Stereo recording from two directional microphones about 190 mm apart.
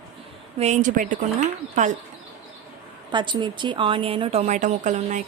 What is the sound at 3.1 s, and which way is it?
Speech, 25° right (ahead or behind).